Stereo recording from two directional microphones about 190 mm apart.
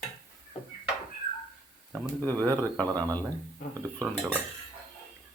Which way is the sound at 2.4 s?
10° left (ahead or behind).